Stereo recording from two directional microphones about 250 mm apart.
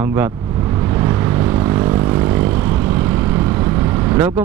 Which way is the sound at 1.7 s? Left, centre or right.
Centre.